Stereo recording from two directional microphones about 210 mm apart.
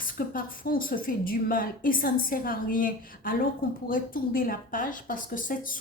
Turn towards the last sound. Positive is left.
turn(degrees=40)  # may be behind; listen again after turning